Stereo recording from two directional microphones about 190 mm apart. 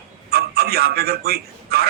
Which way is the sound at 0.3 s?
55° right (ahead or behind).